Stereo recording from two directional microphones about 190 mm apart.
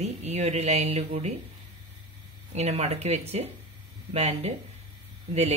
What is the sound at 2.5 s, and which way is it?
Speech, 35° right (ahead or behind).